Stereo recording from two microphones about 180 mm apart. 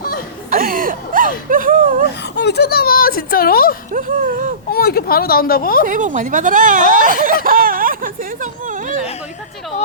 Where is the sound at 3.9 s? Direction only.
50° right (ahead or behind).